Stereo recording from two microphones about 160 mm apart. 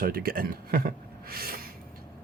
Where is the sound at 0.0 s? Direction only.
65° right (ahead or behind).